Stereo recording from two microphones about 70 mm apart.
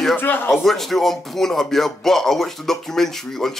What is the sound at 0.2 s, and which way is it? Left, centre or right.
Speech, left.